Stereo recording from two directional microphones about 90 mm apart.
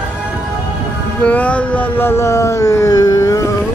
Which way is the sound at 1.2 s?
15° left (ahead or behind).